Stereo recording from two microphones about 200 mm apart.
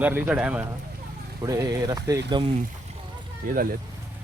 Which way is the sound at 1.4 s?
15° right (ahead or behind).